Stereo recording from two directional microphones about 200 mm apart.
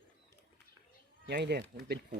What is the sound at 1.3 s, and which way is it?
Speech, 55° right (ahead or behind).